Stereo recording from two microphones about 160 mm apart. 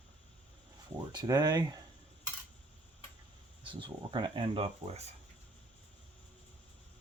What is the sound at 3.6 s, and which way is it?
Speech, 30° right (ahead or behind).